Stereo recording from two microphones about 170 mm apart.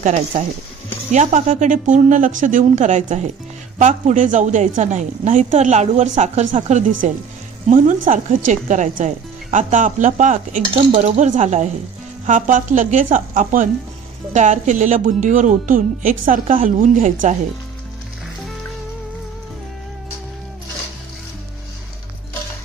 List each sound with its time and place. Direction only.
0.0 s a woman's voice: 45° right (ahead or behind)
10.8 s a woman's voice: 35° right (ahead or behind)